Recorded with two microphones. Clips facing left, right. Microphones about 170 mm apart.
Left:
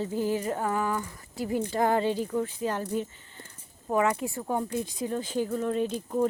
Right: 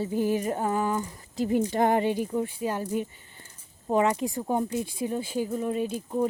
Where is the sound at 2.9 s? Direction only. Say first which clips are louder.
Right 1 dB; 10° right (ahead or behind).